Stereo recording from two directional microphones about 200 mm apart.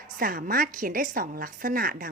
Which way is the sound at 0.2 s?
45° right (ahead or behind).